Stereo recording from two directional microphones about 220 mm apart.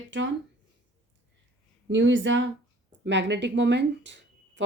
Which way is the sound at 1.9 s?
55° right (ahead or behind).